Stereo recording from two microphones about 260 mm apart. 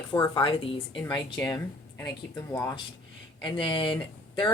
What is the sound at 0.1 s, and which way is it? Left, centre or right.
Speech, centre.